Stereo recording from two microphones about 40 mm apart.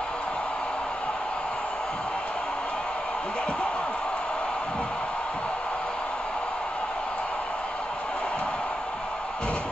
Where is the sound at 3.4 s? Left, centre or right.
Left.